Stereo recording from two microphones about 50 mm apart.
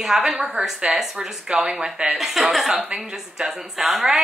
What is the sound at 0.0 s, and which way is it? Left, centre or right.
A woman's voice, centre.